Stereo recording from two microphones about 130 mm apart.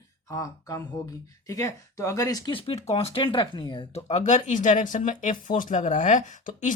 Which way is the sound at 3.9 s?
60° left (ahead or behind).